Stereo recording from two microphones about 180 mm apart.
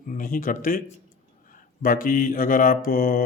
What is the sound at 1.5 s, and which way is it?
Mantra, 50° left (ahead or behind).